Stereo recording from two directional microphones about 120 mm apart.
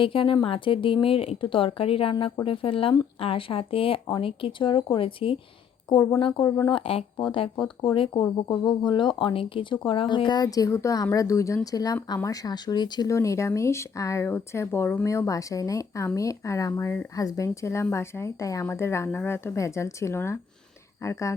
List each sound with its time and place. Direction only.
0.0 s speech: 45° left (ahead or behind); by 21.3 s 25° left (ahead or behind)